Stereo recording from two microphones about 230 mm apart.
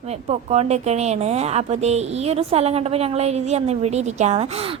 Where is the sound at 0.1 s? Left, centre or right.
Right.